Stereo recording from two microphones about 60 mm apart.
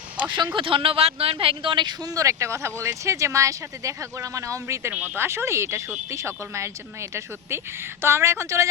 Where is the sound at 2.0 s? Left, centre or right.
Right.